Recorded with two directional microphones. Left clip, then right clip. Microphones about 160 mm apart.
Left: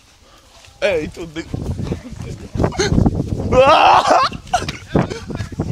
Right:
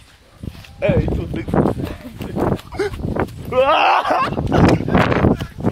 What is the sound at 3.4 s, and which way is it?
Speech, 55° left (ahead or behind).